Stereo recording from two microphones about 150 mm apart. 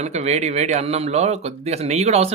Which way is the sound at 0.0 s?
45° right (ahead or behind).